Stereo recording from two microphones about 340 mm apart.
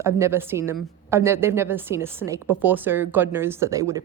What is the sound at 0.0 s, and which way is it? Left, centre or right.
A woman's voice, centre.